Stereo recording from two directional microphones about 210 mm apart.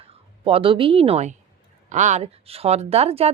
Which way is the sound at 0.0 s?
25° right (ahead or behind).